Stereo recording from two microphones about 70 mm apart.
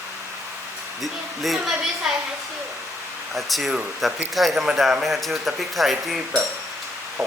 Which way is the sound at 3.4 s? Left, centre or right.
Centre.